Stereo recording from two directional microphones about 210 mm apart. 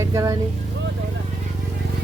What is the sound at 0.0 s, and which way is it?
Speech, 15° right (ahead or behind).